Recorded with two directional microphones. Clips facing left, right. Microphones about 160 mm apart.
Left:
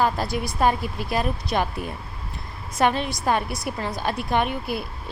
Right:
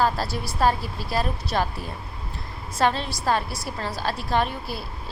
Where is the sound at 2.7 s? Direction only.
15° left (ahead or behind).